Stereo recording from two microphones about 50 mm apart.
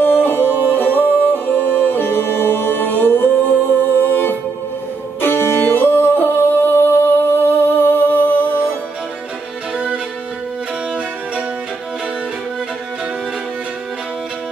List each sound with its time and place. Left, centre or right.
0.0 s music: left